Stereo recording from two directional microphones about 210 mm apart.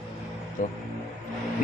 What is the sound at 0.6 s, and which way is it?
Speech, 40° left (ahead or behind).